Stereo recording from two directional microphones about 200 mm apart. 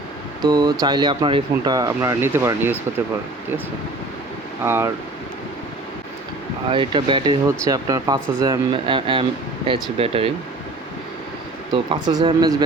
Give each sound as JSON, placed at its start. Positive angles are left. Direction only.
{"t": 0.4, "sound": "speech", "side_deg": -20}
{"t": 4.6, "sound": "speech", "side_deg": -10}
{"t": 6.7, "sound": "speech", "side_deg": -25}
{"t": 11.7, "sound": "speech", "side_deg": -25}